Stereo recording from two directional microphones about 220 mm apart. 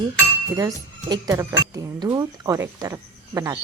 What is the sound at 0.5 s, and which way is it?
A woman's voice, 15° right (ahead or behind).